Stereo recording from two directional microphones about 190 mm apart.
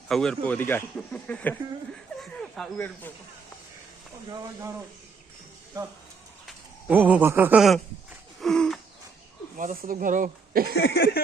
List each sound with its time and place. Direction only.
0.1 s a man's voice: 5° left (ahead or behind)
6.8 s speech: 10° right (ahead or behind)
8.4 s wheeze: 5° left (ahead or behind)
9.6 s speech: 45° right (ahead or behind)
10.8 s speech: 65° left (ahead or behind)